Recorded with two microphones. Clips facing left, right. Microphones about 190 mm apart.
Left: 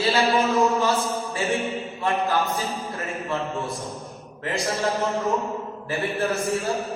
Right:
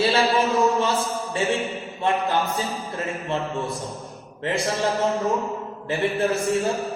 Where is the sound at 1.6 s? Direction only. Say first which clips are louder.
Left 1 dB; centre (ahead or behind).